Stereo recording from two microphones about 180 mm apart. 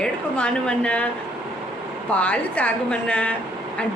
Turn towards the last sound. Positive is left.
turn(degrees=5)  # may be behind; listen again after turning